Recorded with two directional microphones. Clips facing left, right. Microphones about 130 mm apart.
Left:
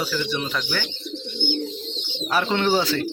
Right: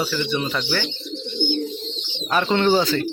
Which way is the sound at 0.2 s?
Centre (ahead or behind).